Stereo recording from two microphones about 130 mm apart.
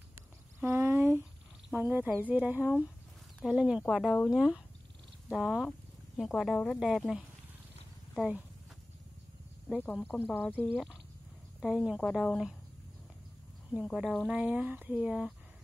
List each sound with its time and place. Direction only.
0.6 s a sound: 20° right (ahead or behind)
1.8 s a woman's voice: 15° right (ahead or behind)
5.7 s a sound: centre (ahead or behind)
6.6 s a woman's voice: centre (ahead or behind)
8.2 s speech: 10° right (ahead or behind)
9.9 s speech: 10° left (ahead or behind)
10.7 s a woman's voice: 5° right (ahead or behind)
13.9 s speech: 5° right (ahead or behind)